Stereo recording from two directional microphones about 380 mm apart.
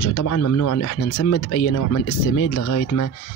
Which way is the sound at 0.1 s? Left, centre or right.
Left.